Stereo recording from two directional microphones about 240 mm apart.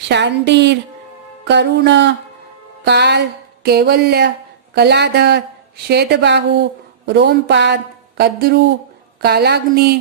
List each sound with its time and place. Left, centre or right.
0.1 s a woman's voice: right